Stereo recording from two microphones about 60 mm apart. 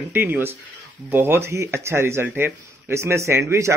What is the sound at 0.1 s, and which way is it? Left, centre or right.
Speech, right.